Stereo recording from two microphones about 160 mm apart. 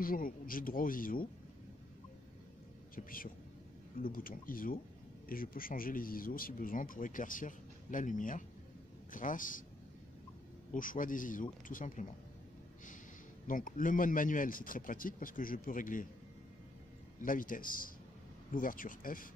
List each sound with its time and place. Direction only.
0.0 s speech: 60° left (ahead or behind)
3.0 s speech: 60° left (ahead or behind)
10.7 s speech: 55° left (ahead or behind)
13.5 s speech: 55° left (ahead or behind)
17.2 s speech: 60° left (ahead or behind)